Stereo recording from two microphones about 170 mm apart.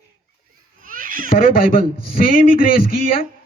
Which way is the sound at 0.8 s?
55° right (ahead or behind).